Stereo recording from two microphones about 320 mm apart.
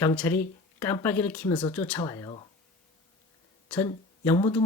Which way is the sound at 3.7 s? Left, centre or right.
Centre.